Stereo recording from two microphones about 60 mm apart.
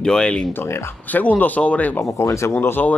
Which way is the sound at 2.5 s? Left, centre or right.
Left.